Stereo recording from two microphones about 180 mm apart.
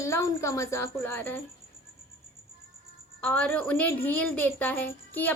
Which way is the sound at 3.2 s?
10° left (ahead or behind).